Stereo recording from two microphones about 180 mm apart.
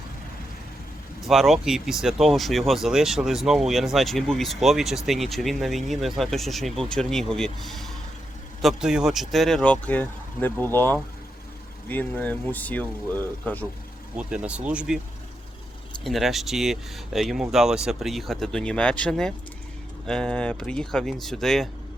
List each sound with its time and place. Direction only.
1.3 s speech: centre (ahead or behind)
14.2 s speech: 5° right (ahead or behind)
16.0 s speech: centre (ahead or behind)